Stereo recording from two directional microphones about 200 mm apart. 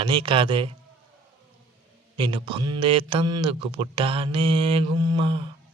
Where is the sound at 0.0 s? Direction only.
25° right (ahead or behind).